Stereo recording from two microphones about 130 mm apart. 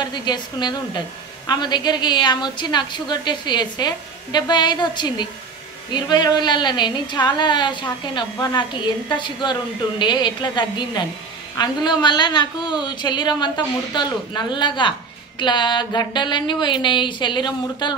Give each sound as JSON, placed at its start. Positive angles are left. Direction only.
{"t": 0.0, "sound": "a woman's voice", "side_deg": 35}